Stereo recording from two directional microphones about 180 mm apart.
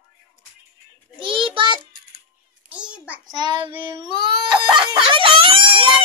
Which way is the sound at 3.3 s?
25° right (ahead or behind).